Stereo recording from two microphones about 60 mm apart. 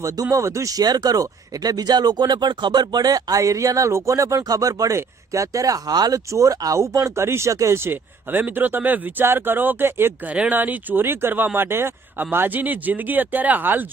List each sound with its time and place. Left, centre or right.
0.0 s speech: right
4.9 s speech: right
6.7 s speech: right
7.8 s speech: right
10.2 s speech: centre
10.5 s speech: right